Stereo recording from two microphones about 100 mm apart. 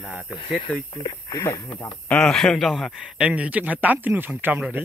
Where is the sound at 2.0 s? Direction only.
10° left (ahead or behind); by 4.6 s 20° right (ahead or behind).